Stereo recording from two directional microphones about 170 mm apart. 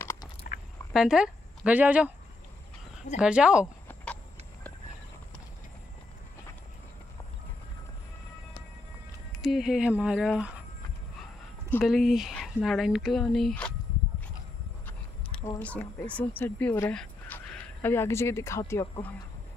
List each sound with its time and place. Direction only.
0.0 s biting: 15° left (ahead or behind)
0.9 s speech: 5° right (ahead or behind)
3.2 s speech: 5° right (ahead or behind)
9.4 s speech: centre (ahead or behind)
11.8 s speech: centre (ahead or behind)
14.9 s speech: 10° left (ahead or behind)